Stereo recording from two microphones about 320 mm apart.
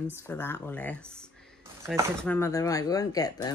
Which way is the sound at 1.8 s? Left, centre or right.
Centre.